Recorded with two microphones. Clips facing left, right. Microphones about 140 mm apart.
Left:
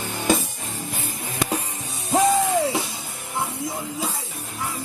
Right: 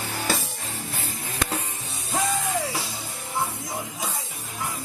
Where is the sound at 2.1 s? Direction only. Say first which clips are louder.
Left 8 dB; 25° left (ahead or behind).